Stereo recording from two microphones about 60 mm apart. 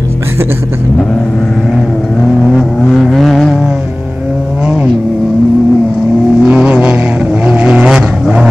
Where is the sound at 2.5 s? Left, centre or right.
Centre.